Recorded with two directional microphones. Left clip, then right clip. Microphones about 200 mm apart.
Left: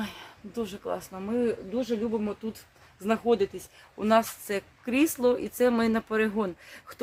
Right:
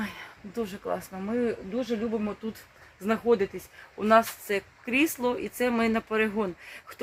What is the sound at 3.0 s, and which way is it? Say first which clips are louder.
Speech: even; 5° left (ahead or behind).